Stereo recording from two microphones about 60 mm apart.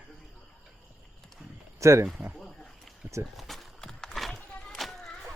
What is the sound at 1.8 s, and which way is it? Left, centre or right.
Speech, right.